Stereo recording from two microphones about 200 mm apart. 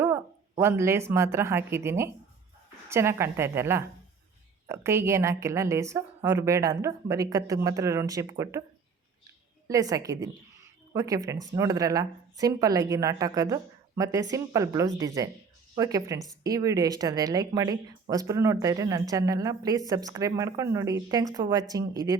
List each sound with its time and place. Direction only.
0.0 s a woman's voice: 10° right (ahead or behind)
9.6 s a woman's voice: 15° right (ahead or behind)